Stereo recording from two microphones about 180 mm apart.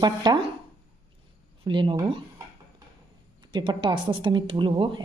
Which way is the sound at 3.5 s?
25° right (ahead or behind).